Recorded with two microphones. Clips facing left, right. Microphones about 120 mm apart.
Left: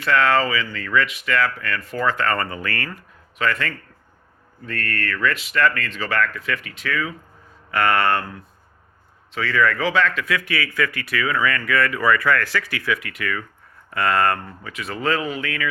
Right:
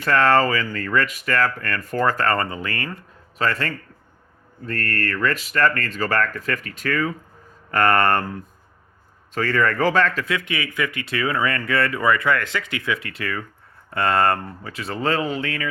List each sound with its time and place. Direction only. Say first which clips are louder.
0.0 s speech: right 1 dB; 40° right (ahead or behind); by 3.0 s 25° right (ahead or behind)
3.3 s speech: even; 35° right (ahead or behind)
10.2 s speech: left 1 dB; 25° right (ahead or behind)